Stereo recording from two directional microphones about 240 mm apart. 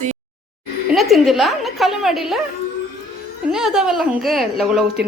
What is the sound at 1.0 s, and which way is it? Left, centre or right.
A woman's voice, centre.